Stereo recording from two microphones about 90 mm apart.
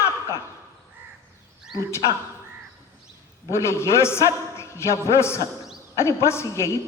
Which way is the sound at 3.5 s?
30° left (ahead or behind).